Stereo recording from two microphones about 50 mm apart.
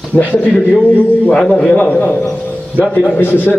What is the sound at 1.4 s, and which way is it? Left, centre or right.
Speech, centre.